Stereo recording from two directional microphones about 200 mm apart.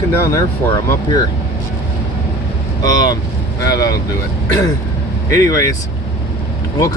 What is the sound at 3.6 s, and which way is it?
Speech, 15° left (ahead or behind).